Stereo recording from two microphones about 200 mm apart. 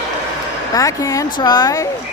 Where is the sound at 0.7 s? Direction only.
15° left (ahead or behind).